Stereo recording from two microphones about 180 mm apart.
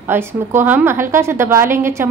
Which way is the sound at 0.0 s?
10° right (ahead or behind).